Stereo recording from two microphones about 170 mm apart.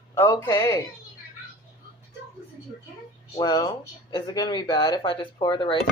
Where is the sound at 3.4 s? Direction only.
20° left (ahead or behind).